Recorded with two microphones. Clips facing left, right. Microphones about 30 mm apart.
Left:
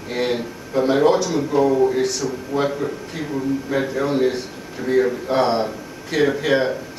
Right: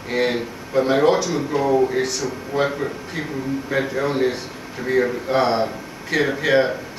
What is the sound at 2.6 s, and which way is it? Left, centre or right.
A man's voice, centre.